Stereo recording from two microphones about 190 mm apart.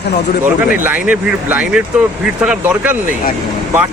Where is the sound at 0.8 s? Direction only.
5° right (ahead or behind).